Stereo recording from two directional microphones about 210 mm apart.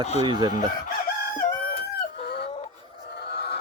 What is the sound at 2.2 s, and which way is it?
Fowl, 50° left (ahead or behind).